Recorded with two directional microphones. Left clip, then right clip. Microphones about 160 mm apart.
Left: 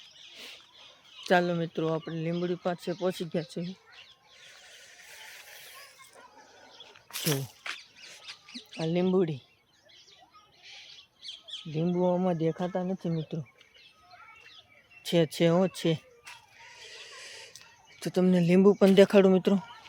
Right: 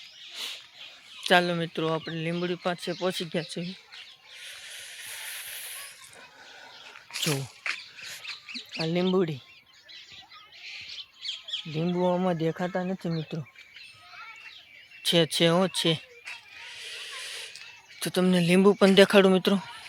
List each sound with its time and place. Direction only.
0.3 s rodents: centre (ahead or behind)
1.2 s speech: centre (ahead or behind)
4.4 s a sound: 5° left (ahead or behind)
7.1 s a sound: 30° right (ahead or behind)
7.6 s rodents: 5° right (ahead or behind)
8.8 s speech: 15° right (ahead or behind)
11.2 s squawk: 90° left
11.7 s speech: 5° right (ahead or behind)
15.0 s speech: 5° left (ahead or behind)
16.6 s a sound: 10° left (ahead or behind)
18.0 s speech: 10° left (ahead or behind)